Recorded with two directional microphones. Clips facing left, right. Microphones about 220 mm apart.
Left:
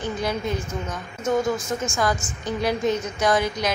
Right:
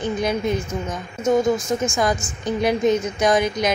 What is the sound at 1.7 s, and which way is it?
A woman's voice, 20° right (ahead or behind).